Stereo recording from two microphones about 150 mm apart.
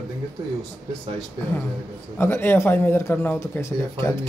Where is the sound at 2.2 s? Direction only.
15° left (ahead or behind).